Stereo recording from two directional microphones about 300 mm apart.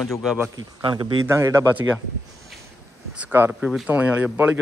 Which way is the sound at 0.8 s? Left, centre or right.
Centre.